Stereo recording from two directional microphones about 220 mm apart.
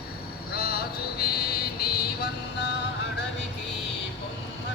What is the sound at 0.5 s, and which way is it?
Music, 45° left (ahead or behind).